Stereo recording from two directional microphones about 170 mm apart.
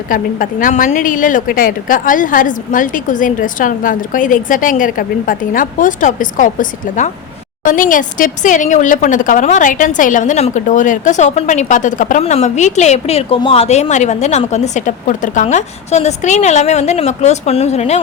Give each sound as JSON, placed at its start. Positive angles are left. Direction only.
{"t": 0.1, "sound": "speech", "side_deg": 50}